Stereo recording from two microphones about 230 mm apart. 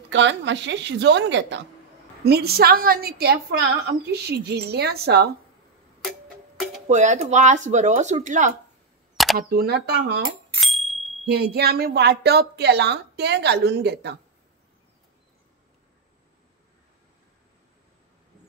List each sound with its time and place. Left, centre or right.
0.1 s a woman's voice: right
6.0 s music: centre
6.9 s speech: right
9.1 s a sound: centre
9.4 s a woman's voice: right
10.6 s bicycle bell: centre
11.2 s a woman's voice: right